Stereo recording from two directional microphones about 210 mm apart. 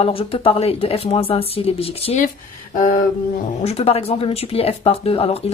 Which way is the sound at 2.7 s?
40° left (ahead or behind).